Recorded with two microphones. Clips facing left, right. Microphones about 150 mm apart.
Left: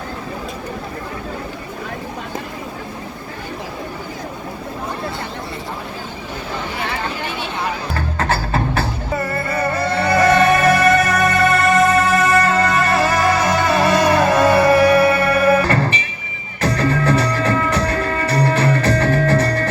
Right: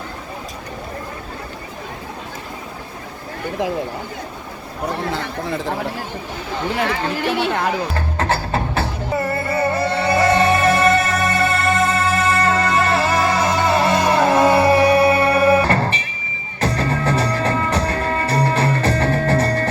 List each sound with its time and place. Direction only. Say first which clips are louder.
7.3 s speech: right 5 dB; 65° right (ahead or behind)
8.2 s music: left 1 dB; 20° right (ahead or behind)